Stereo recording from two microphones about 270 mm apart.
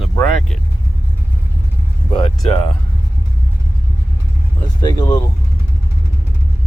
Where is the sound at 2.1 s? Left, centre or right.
Centre.